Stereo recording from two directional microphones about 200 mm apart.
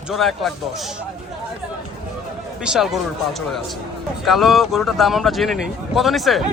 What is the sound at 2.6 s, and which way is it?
Speech, centre (ahead or behind).